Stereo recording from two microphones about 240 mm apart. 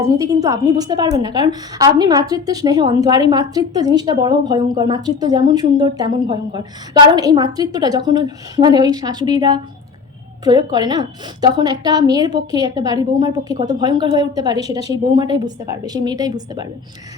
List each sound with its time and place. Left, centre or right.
0.0 s a woman's voice: centre